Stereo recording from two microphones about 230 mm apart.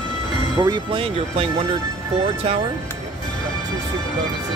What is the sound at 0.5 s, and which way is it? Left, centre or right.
Speech, centre.